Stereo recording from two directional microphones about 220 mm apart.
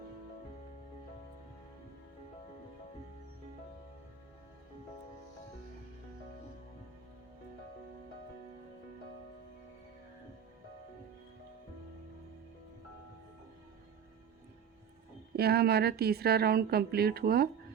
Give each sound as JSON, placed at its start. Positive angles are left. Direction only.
{"t": 15.4, "sound": "a woman's voice", "side_deg": -45}